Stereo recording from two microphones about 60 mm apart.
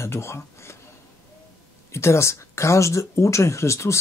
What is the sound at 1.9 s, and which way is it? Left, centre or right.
Speech, left.